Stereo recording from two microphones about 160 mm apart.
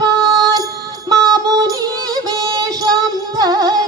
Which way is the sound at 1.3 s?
25° right (ahead or behind).